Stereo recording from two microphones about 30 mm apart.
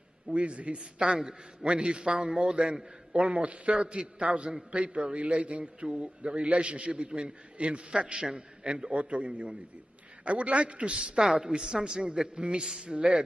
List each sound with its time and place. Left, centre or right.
0.3 s a woman's voice: right
0.9 s a man's voice: right
2.1 s a man's voice: right
2.7 s a man's voice: right
8.9 s a man's voice: right
11.0 s a man's voice: right